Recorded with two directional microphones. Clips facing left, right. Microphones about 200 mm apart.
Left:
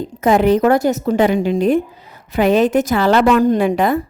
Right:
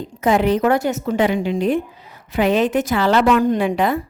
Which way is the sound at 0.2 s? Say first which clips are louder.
Left 3 dB; 45° left (ahead or behind).